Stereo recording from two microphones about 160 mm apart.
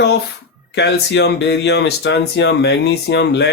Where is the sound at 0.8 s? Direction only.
90° left.